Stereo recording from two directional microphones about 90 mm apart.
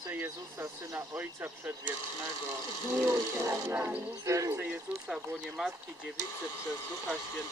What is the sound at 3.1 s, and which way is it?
Speech, 35° right (ahead or behind).